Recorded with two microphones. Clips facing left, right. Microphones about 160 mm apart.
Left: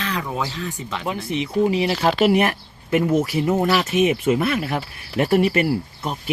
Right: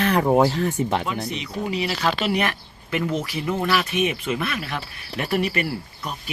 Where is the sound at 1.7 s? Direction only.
20° left (ahead or behind).